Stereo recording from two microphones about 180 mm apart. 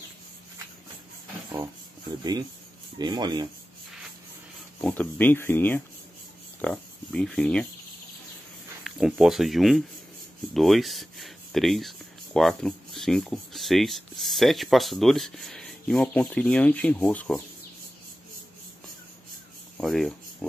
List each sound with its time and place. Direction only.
3.0 s speech: 25° right (ahead or behind)
4.8 s speech: 10° left (ahead or behind)
8.8 s speech: centre (ahead or behind)
19.8 s speech: centre (ahead or behind)